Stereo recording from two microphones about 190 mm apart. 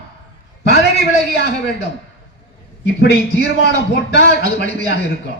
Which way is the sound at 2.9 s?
60° left (ahead or behind).